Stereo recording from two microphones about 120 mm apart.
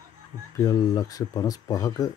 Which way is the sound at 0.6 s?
30° left (ahead or behind).